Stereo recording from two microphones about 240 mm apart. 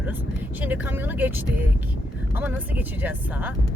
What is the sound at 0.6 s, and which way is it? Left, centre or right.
Speech, centre.